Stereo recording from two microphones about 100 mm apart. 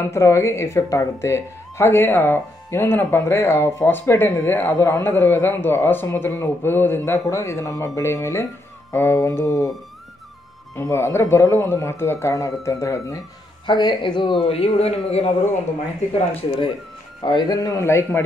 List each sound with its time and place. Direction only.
0.1 s a woman's voice: 30° left (ahead or behind)
4.7 s speech: 35° left (ahead or behind)
5.0 s a woman's voice: 20° left (ahead or behind)
10.8 s a woman's voice: 30° left (ahead or behind)
13.7 s speech: 50° left (ahead or behind)
14.4 s speech: 85° left
17.2 s speech: 45° left (ahead or behind)
17.8 s a woman's voice: 25° left (ahead or behind)